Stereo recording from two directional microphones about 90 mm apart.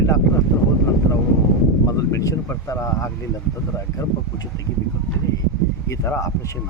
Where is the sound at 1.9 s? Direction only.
40° left (ahead or behind).